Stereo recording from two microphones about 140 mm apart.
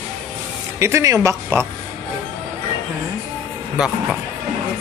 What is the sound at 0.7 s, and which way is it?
Speech, 20° right (ahead or behind).